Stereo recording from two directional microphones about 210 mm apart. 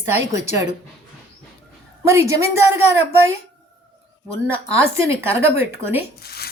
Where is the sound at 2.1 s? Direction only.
15° right (ahead or behind).